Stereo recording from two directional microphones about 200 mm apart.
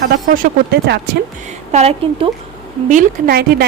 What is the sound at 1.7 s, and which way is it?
Speech, 30° right (ahead or behind).